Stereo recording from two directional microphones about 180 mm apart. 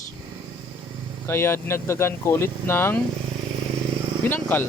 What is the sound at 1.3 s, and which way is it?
Speech, 15° left (ahead or behind).